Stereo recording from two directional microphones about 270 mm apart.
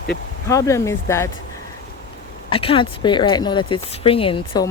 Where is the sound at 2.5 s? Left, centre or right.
Centre.